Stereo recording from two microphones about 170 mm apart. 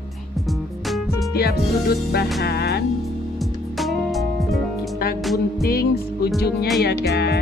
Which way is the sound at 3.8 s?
Centre (ahead or behind).